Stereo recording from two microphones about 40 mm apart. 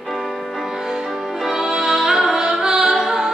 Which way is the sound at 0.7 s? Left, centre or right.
Centre.